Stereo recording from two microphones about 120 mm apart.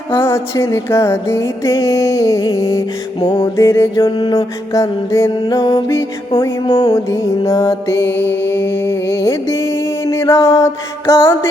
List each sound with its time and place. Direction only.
0.1 s music: 20° left (ahead or behind)
3.2 s music: 45° left (ahead or behind)
3.4 s music: 25° left (ahead or behind)
4.0 s music: 45° left (ahead or behind)
4.7 s music: 25° left (ahead or behind)
5.3 s music: 35° left (ahead or behind)
6.9 s music: 25° left (ahead or behind)